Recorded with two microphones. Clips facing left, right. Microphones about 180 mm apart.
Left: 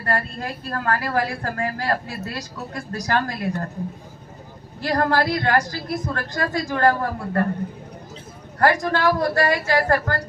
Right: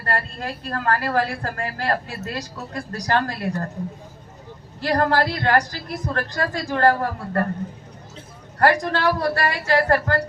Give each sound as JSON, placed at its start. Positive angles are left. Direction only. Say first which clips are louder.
{"t": 0.1, "sound": "a woman's voice", "louder": "left 1 dB", "side_deg": -35}
{"t": 4.8, "sound": "a woman's voice", "louder": "right 1 dB", "side_deg": -35}
{"t": 8.5, "sound": "a woman's voice", "louder": "even", "side_deg": -35}